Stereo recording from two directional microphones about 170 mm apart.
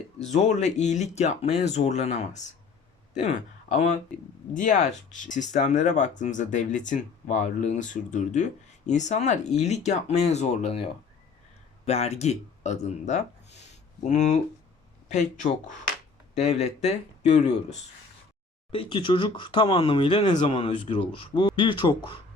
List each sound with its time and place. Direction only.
0.2 s speech: 45° left (ahead or behind)
11.9 s speech: 40° left (ahead or behind)
18.7 s speech: 30° left (ahead or behind)
21.3 s speech: 30° left (ahead or behind)